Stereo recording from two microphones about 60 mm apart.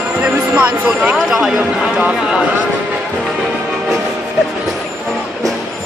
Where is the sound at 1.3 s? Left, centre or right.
Centre.